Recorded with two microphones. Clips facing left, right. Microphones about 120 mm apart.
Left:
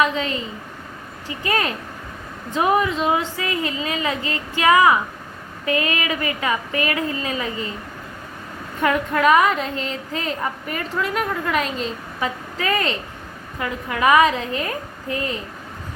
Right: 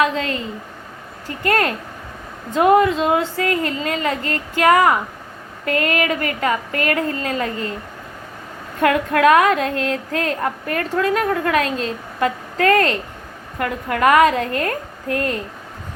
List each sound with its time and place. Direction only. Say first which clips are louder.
1.3 s a woman's voice: right 4 dB; 55° right (ahead or behind)
8.8 s a woman's voice: right 4 dB; 70° right (ahead or behind)
11.6 s a woman's voice: right 3 dB; centre (ahead or behind)
12.2 s a woman's voice: right 7 dB; 60° right (ahead or behind)